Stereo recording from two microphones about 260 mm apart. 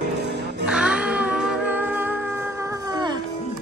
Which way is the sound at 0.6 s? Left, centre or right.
Centre.